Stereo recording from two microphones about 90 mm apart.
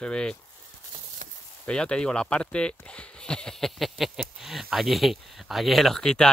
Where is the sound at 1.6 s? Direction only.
10° left (ahead or behind).